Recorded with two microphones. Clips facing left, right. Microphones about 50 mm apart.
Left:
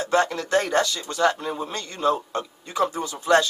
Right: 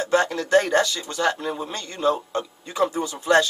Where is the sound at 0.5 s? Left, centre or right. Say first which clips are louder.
Right 7 dB; right.